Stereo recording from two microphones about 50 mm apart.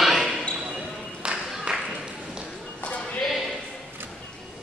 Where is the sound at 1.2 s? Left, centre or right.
Centre.